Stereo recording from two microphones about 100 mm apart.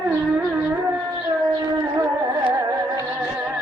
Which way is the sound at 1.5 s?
35° right (ahead or behind).